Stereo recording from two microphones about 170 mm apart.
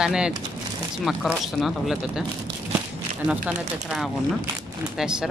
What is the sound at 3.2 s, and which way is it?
Speech, 5° right (ahead or behind).